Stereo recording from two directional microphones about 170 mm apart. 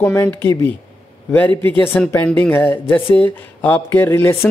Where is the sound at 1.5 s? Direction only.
30° right (ahead or behind).